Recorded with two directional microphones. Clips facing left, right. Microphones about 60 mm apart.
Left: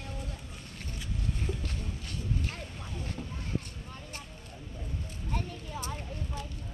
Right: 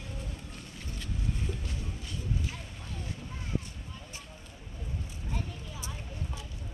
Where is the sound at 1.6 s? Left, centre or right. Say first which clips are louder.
Left 1 dB; left.